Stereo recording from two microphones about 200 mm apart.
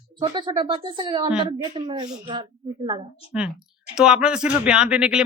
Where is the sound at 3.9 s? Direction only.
5° right (ahead or behind).